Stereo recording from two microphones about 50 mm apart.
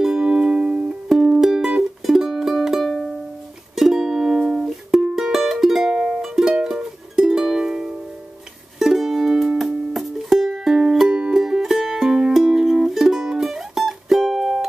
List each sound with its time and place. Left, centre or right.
0.0 s music: centre
1.0 s music: centre
2.8 s music: centre
3.7 s music: centre
5.9 s music: centre
11.1 s music: centre
11.3 s music: centre